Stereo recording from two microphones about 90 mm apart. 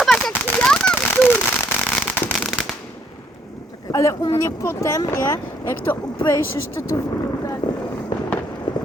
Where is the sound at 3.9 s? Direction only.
35° left (ahead or behind).